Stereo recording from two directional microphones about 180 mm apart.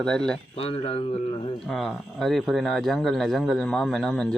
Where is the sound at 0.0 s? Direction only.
5° left (ahead or behind).